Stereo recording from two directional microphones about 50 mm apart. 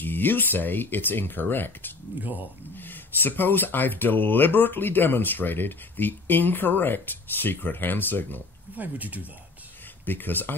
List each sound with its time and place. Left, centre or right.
0.0 s speech: left
2.1 s speech: right
2.7 s speech: left
8.7 s speech: right
10.0 s speech: left